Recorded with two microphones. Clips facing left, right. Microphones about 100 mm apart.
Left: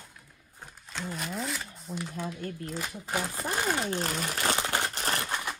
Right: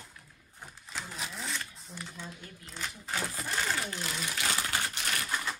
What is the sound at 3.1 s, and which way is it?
Speech, 20° left (ahead or behind).